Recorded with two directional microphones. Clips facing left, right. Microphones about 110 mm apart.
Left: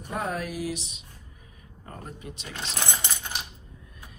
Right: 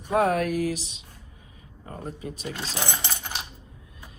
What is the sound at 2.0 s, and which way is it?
Speech, 35° right (ahead or behind).